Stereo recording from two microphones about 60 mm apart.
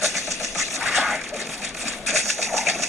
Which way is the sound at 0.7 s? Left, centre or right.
Centre.